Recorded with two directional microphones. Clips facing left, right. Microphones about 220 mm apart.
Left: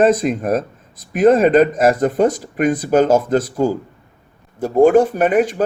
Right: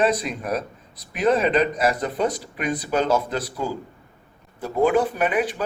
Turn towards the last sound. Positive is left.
turn(degrees=45)  # may be behind; listen again after turning